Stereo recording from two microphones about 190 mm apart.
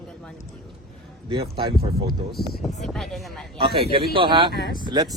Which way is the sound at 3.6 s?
30° right (ahead or behind).